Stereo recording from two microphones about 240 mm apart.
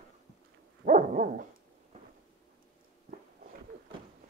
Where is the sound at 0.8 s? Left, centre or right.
Right.